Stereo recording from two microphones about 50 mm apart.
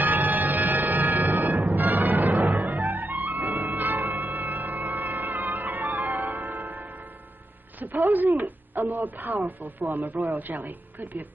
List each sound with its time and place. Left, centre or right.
0.0 s music: right
8.1 s speech: right